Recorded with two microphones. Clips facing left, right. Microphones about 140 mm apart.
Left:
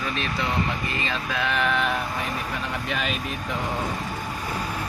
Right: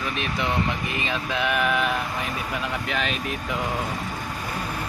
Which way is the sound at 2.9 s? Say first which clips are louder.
Even; centre (ahead or behind).